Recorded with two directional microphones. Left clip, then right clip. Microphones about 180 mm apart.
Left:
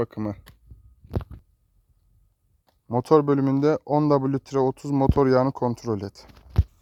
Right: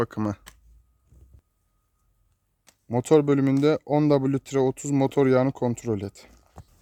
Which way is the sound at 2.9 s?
5° right (ahead or behind).